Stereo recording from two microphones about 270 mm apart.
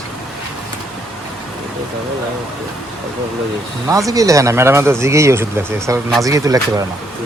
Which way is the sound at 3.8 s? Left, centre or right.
Centre.